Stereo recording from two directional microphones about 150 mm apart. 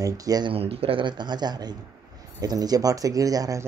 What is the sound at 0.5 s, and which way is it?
Speech, 40° right (ahead or behind).